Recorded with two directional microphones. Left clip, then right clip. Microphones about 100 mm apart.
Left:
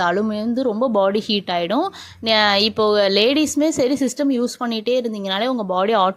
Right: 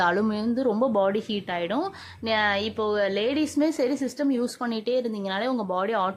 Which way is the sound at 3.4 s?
35° left (ahead or behind).